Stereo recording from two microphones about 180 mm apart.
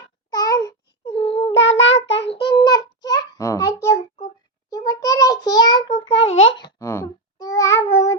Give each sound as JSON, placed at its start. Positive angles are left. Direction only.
{"t": 0.3, "sound": "babbling", "side_deg": 20}
{"t": 1.1, "sound": "a sound", "side_deg": 30}
{"t": 1.5, "sound": "child singing", "side_deg": 90}
{"t": 2.5, "sound": "a sound", "side_deg": 25}
{"t": 4.7, "sound": "child singing", "side_deg": 20}
{"t": 6.5, "sound": "babbling", "side_deg": 25}